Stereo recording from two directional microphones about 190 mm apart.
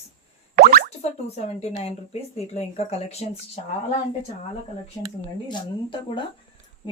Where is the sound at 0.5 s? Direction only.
50° right (ahead or behind).